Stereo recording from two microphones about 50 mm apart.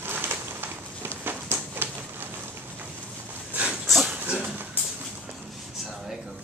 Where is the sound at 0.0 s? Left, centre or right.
Right.